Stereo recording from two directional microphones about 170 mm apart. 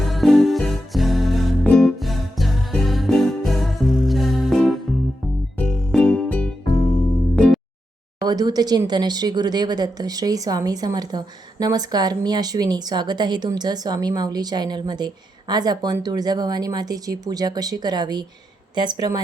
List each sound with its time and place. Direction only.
0.0 s music: centre (ahead or behind)
8.2 s speech: 25° right (ahead or behind)